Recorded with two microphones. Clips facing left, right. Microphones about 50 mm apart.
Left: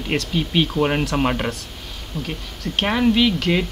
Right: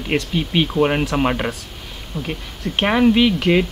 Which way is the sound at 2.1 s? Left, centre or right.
Centre.